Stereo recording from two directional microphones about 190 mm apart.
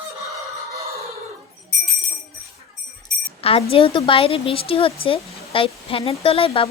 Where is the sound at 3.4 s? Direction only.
30° left (ahead or behind).